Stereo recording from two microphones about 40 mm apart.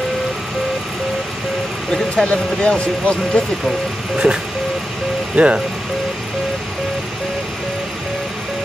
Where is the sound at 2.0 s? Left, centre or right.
Left.